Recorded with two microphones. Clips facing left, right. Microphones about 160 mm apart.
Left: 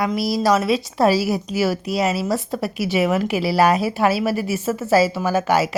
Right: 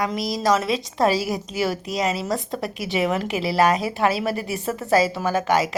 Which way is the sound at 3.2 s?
25° right (ahead or behind).